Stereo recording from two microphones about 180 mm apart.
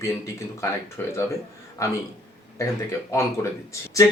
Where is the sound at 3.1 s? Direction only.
15° left (ahead or behind).